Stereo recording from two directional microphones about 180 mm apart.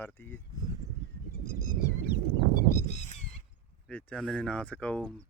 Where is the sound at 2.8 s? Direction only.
40° left (ahead or behind).